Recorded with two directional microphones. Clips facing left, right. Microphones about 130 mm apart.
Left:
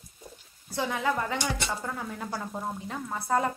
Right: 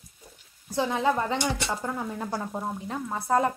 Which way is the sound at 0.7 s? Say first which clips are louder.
Right 4 dB; 20° right (ahead or behind).